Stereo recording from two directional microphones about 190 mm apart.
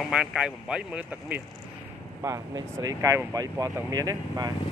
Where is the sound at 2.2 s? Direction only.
20° right (ahead or behind).